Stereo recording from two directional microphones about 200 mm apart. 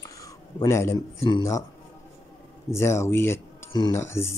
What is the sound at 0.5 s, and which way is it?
Speech, 15° left (ahead or behind).